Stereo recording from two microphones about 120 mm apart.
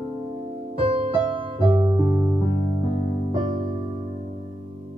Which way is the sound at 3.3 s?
45° right (ahead or behind).